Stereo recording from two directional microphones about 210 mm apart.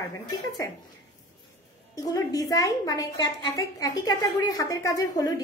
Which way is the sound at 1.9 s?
15° left (ahead or behind).